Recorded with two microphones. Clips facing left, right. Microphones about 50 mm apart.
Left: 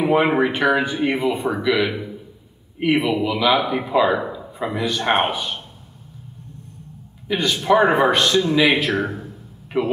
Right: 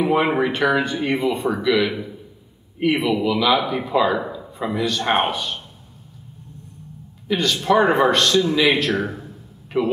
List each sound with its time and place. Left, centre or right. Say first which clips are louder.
0.0 s a man's voice: left 1 dB; centre
3.1 s a man's voice: even; centre
7.2 s speech: left 1 dB; centre